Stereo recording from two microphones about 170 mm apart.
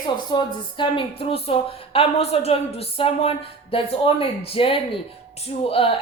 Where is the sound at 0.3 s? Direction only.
25° left (ahead or behind).